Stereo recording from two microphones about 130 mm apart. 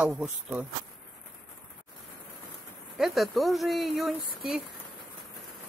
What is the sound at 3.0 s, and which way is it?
Speech, centre (ahead or behind).